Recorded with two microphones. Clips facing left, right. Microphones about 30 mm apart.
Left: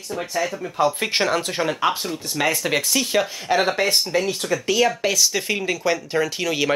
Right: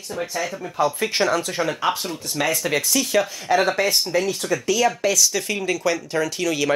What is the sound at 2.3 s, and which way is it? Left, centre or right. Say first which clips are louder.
Speech: left 1 dB; centre.